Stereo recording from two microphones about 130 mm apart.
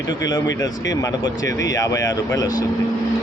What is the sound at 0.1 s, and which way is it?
A man's voice, 30° left (ahead or behind).